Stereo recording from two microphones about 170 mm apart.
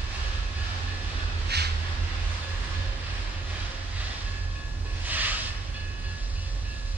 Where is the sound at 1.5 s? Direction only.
75° right (ahead or behind).